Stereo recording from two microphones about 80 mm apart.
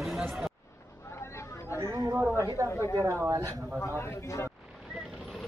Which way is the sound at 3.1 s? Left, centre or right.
Right.